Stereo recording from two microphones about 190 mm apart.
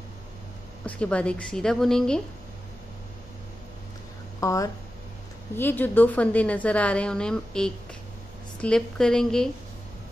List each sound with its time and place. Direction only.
0.8 s a woman's voice: 5° left (ahead or behind)
4.4 s a woman's voice: 15° left (ahead or behind)